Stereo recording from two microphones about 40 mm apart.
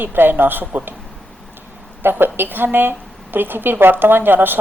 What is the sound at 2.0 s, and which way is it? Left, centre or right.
A woman's voice, right.